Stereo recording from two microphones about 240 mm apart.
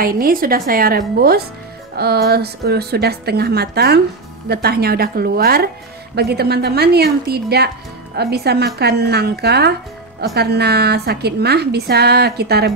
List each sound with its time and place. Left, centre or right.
0.0 s a woman's voice: right